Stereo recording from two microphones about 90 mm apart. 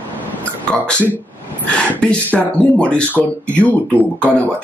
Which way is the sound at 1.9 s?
10° left (ahead or behind).